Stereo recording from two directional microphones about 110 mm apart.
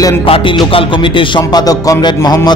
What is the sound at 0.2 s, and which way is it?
A man's voice, 50° left (ahead or behind).